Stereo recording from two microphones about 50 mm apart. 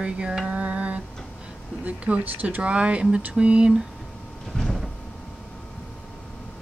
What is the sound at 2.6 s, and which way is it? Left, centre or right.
Speech, right.